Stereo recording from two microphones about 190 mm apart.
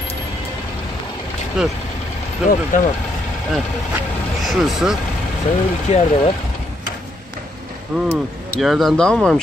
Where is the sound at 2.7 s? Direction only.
40° left (ahead or behind).